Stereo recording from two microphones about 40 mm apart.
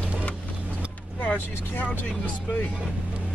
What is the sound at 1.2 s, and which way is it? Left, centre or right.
Speech, left.